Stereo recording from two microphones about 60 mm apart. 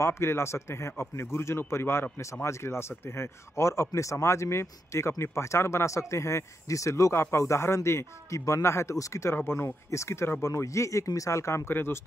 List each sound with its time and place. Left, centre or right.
0.0 s speech: left
9.3 s speech: left
9.8 s speech: left
10.5 s speech: left
11.7 s speech: left